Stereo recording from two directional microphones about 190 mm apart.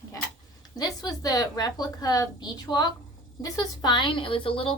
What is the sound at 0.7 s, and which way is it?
Speech, 20° left (ahead or behind).